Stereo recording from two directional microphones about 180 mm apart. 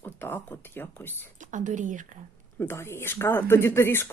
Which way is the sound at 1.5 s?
45° right (ahead or behind).